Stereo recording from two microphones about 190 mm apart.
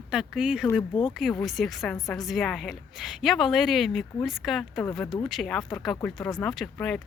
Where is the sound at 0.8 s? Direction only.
25° left (ahead or behind).